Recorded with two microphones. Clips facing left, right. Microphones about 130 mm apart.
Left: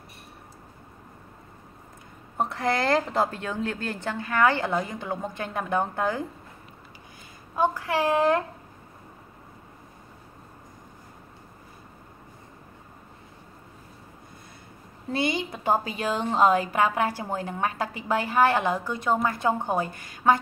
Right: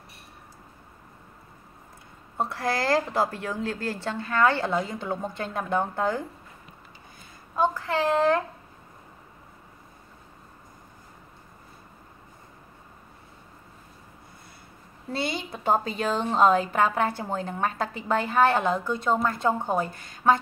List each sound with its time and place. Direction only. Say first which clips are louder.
2.3 s a woman's voice: left 2 dB; 20° left (ahead or behind)
7.5 s a woman's voice: even; 15° left (ahead or behind)
15.1 s a woman's voice: left 3 dB; 15° left (ahead or behind)